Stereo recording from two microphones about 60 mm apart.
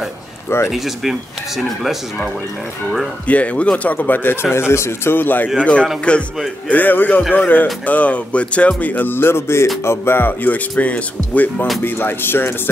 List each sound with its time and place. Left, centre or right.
0.7 s speech: centre
3.3 s speech: left
5.1 s speech: left
5.6 s speech: centre
6.7 s speech: left
11.8 s speech: left